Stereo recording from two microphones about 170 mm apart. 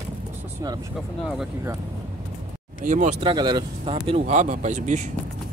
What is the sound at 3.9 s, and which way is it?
Speech, 40° right (ahead or behind).